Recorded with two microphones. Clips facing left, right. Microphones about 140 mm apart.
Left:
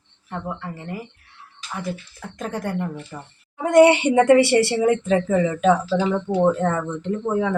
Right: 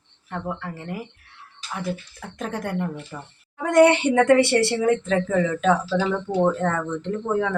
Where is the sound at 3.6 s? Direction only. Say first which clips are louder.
Left 2 dB; 20° left (ahead or behind).